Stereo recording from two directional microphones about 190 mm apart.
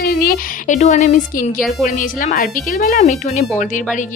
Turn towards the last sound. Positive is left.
turn(degrees=40)  # may be behind; listen again after turning